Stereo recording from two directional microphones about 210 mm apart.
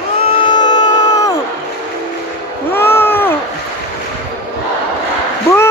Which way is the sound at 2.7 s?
10° left (ahead or behind).